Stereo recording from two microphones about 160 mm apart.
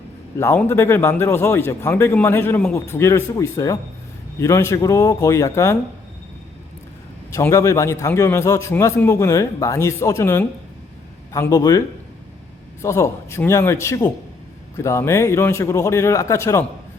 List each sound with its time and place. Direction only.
0.3 s a man's voice: 15° left (ahead or behind)
7.3 s a man's voice: 20° left (ahead or behind)
12.8 s a man's voice: 15° left (ahead or behind)